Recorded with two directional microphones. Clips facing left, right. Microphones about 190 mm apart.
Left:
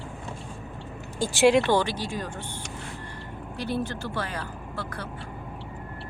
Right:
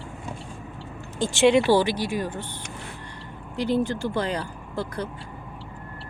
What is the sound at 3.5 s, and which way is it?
Speech, 15° right (ahead or behind).